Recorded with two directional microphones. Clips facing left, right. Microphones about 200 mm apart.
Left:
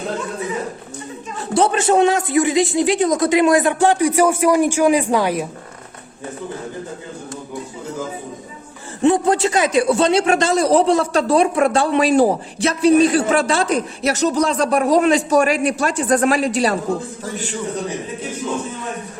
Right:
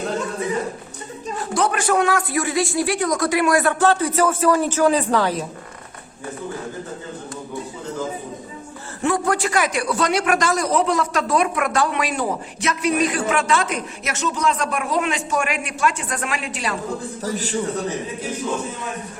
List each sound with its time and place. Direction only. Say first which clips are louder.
1.5 s a man's voice: left 5 dB; 25° left (ahead or behind)
9.0 s a man's voice: left 6 dB; 20° left (ahead or behind); by 16.7 s 35° left (ahead or behind)
17.2 s a man's voice: right 5 dB; 40° right (ahead or behind)